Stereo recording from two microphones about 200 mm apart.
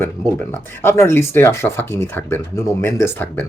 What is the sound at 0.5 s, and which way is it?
Speech, 10° left (ahead or behind).